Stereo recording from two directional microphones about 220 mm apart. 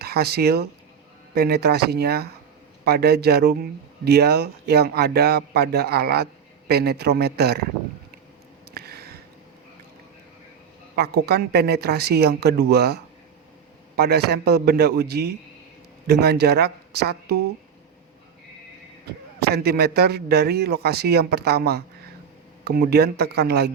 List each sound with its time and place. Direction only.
0.0 s a man's voice: 45° right (ahead or behind)
8.7 s a sound: 45° right (ahead or behind)
10.9 s a man's voice: 45° right (ahead or behind)
19.4 s a man's voice: 45° right (ahead or behind)